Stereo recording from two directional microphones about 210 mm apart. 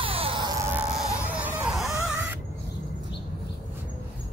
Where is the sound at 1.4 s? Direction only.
5° right (ahead or behind).